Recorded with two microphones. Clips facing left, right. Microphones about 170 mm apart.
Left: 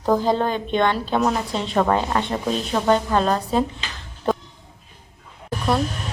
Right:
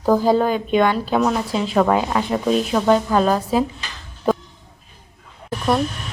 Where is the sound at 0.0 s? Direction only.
5° right (ahead or behind).